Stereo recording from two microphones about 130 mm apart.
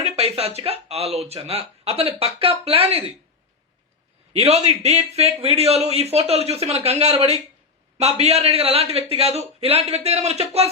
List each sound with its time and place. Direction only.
0.0 s a man's voice: 55° right (ahead or behind)
4.3 s a man's voice: 50° right (ahead or behind)